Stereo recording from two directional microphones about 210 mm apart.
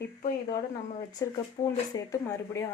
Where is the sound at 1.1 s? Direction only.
15° left (ahead or behind).